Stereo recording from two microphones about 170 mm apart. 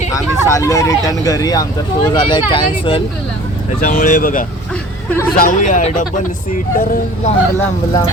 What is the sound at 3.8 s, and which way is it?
Speech, 55° left (ahead or behind).